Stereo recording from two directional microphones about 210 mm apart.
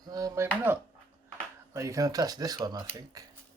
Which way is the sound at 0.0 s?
20° right (ahead or behind).